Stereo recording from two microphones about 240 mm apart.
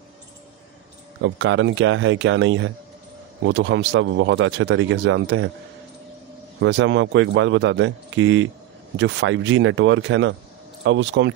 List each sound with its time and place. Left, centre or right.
1.2 s speech: right
6.6 s speech: right